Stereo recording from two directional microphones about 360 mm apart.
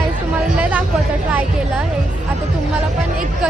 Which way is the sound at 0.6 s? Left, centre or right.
Centre.